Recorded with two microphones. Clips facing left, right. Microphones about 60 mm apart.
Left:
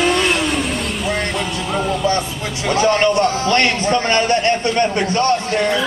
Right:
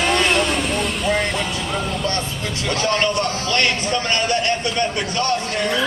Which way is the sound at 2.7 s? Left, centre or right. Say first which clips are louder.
Left 6 dB; left.